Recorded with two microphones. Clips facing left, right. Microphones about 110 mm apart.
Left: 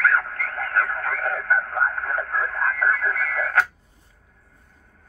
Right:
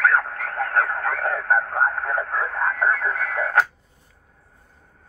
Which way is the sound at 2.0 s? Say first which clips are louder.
Right 1 dB; 30° right (ahead or behind).